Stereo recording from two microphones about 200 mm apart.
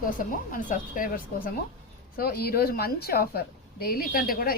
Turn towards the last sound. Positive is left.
turn(degrees=45)  # may be behind; listen again after turning